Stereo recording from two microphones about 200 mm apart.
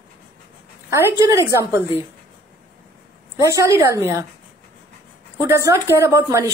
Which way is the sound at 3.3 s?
15° right (ahead or behind).